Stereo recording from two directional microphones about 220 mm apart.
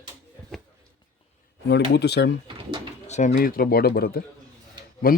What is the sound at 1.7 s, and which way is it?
Speech, 50° left (ahead or behind).